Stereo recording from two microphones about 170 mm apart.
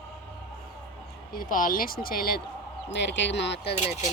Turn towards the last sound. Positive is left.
turn(degrees=40)  # may be behind; listen again after turning